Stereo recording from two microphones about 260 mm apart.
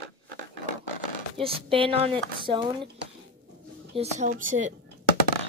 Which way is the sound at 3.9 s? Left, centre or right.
Right.